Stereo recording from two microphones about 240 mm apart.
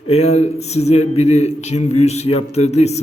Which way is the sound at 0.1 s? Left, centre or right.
Left.